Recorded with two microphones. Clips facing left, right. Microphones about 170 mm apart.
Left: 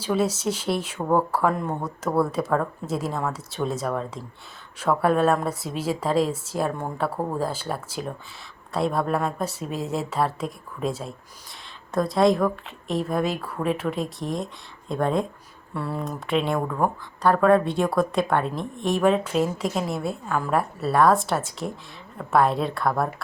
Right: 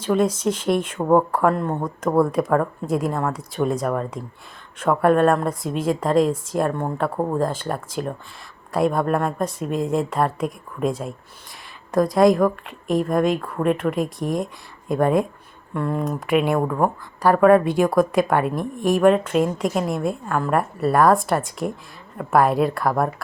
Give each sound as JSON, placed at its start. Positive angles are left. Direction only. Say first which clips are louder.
{"t": 0.0, "sound": "speech", "louder": "right 4 dB", "side_deg": 5}
{"t": 0.9, "sound": "speech", "louder": "right 5 dB", "side_deg": -20}
{"t": 1.3, "sound": "speech", "louder": "right 4 dB", "side_deg": 5}
{"t": 15.7, "sound": "speech", "louder": "right 5 dB", "side_deg": 5}
{"t": 16.0, "sound": "speech", "louder": "right 4 dB", "side_deg": -5}